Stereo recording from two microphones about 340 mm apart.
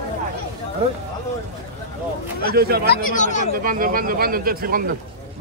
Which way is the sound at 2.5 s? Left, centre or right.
Right.